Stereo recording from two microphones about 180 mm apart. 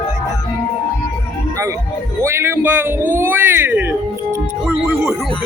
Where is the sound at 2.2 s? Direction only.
15° right (ahead or behind).